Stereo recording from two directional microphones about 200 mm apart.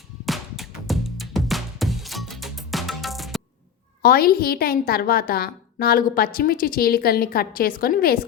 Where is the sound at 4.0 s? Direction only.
50° left (ahead or behind).